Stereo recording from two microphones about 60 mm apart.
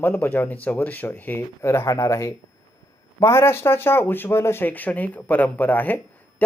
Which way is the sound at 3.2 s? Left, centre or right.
Left.